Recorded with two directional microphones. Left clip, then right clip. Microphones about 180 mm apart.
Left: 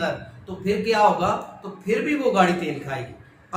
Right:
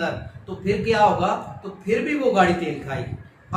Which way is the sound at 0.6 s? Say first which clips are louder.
Even; 15° left (ahead or behind).